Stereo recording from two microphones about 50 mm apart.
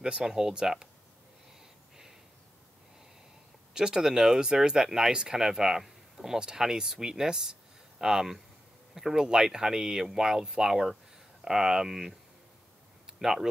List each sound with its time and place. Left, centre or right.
0.0 s speech: centre
3.7 s speech: centre
13.2 s speech: centre